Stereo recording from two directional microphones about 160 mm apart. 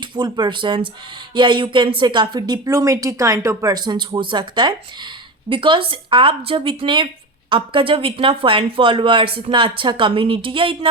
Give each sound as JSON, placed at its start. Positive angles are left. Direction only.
{"t": 0.2, "sound": "a woman's voice", "side_deg": -30}